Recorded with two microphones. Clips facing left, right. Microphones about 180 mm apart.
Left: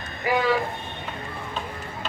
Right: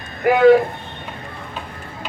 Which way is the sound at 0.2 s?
55° right (ahead or behind).